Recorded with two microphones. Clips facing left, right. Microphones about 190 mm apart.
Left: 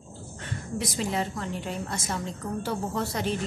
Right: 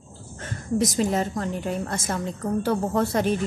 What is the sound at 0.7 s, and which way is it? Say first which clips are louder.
A woman's voice: right 7 dB; 45° right (ahead or behind).